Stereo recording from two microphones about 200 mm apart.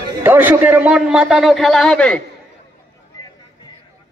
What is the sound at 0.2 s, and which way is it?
A man's voice, 10° right (ahead or behind).